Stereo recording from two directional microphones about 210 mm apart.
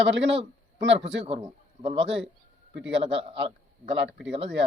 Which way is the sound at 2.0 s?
60° right (ahead or behind).